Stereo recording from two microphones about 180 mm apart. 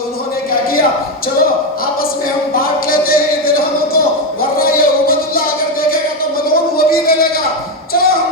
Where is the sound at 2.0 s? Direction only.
55° left (ahead or behind).